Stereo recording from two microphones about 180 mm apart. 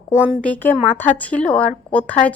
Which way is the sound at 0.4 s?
10° left (ahead or behind).